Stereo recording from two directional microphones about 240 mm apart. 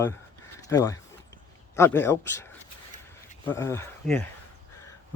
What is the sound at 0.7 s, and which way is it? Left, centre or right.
Speech, centre.